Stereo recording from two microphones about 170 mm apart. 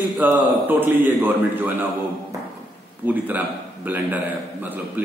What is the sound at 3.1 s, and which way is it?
A man's voice, 10° right (ahead or behind).